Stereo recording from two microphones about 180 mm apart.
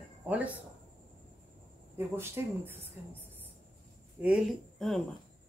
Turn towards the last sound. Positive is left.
turn(degrees=0)  # may be behind; listen again after turning